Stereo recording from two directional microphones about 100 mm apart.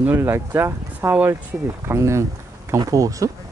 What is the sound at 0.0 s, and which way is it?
Speech, 25° right (ahead or behind).